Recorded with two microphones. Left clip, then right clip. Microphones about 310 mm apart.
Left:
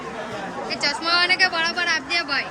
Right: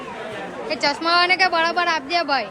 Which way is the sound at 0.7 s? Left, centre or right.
Centre.